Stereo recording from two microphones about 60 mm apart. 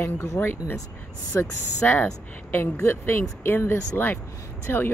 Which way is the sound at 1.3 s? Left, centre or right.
Left.